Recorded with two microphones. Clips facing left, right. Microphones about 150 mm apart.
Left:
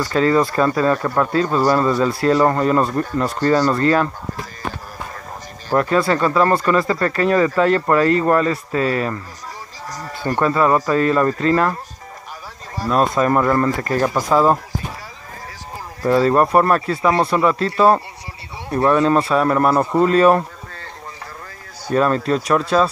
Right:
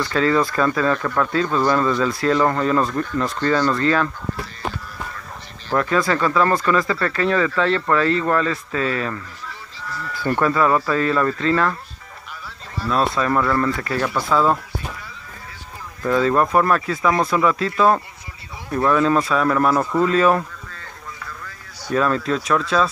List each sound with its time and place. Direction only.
0.0 s speech: 35° left (ahead or behind)
5.8 s speech: 35° left (ahead or behind)
16.0 s speech: 35° left (ahead or behind)
21.8 s speech: 40° left (ahead or behind)